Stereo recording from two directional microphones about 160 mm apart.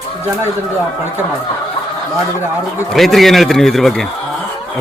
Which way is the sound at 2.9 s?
Centre (ahead or behind).